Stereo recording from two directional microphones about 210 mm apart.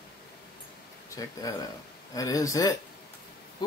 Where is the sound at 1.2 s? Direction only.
15° left (ahead or behind).